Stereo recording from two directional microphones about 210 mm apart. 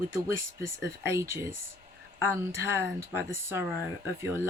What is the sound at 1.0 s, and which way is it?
Speech, 15° right (ahead or behind).